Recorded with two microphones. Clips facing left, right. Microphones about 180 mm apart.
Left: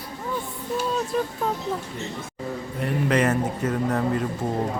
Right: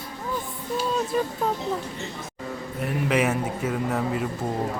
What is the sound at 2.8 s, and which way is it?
Speech, 5° right (ahead or behind).